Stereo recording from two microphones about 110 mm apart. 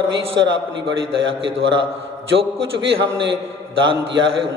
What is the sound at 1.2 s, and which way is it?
Speech, 50° right (ahead or behind).